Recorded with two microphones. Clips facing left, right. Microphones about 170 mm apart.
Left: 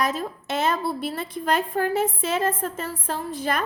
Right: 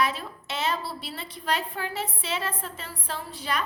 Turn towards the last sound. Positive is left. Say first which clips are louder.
# left 5 dB
turn(degrees=50)  # may be behind; listen again after turning